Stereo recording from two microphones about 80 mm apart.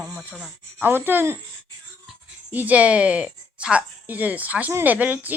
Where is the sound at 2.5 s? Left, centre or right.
Right.